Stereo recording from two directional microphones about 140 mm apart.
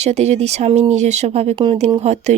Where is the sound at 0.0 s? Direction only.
50° right (ahead or behind).